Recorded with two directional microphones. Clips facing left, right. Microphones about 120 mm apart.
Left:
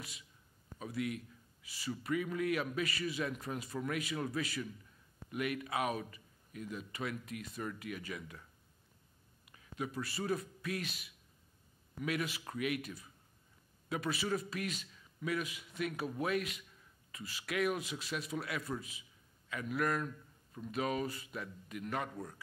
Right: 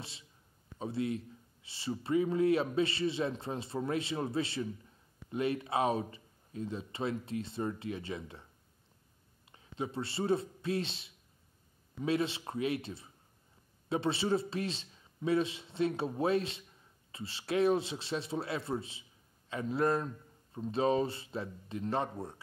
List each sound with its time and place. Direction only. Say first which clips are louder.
0.0 s a man's voice: right 2 dB; 30° right (ahead or behind)
9.5 s a man's voice: right 3 dB; 30° right (ahead or behind)